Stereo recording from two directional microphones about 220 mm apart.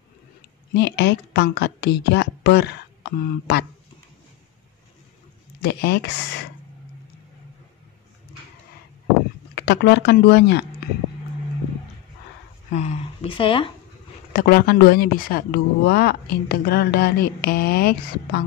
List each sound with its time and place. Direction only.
0.7 s speech: 50° left (ahead or behind)
5.6 s speech: 45° left (ahead or behind)
9.6 s speech: 50° left (ahead or behind)
12.7 s speech: 30° left (ahead or behind)
14.3 s speech: 40° left (ahead or behind)